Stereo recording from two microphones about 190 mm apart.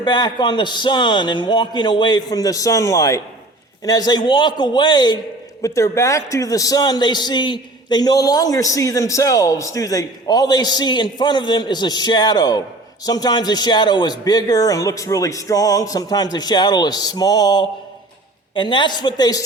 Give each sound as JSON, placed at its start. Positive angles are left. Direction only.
{"t": 0.0, "sound": "a man's voice", "side_deg": 20}